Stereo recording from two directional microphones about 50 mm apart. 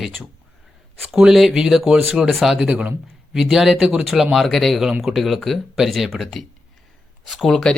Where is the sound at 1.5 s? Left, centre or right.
Centre.